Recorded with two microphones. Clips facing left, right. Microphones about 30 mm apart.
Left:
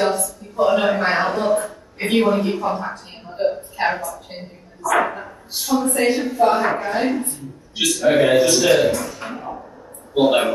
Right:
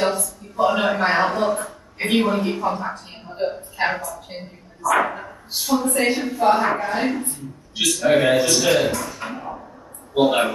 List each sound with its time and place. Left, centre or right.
0.0 s speech: centre
10.1 s a woman's voice: centre